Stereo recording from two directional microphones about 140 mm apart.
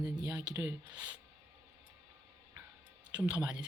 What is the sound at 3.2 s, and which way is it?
Speech, 10° right (ahead or behind).